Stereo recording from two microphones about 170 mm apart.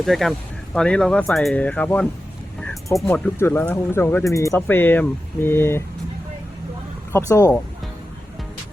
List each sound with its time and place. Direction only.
0.0 s speech: centre (ahead or behind)
2.6 s music: 5° left (ahead or behind)
3.3 s speech: 15° left (ahead or behind)
7.1 s speech: 20° left (ahead or behind)